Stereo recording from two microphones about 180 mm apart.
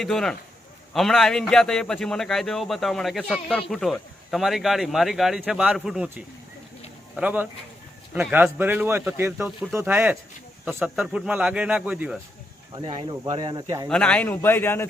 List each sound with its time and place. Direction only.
0.0 s a man's voice: centre (ahead or behind)
12.7 s speech: 25° right (ahead or behind)
13.8 s a man's voice: 5° left (ahead or behind)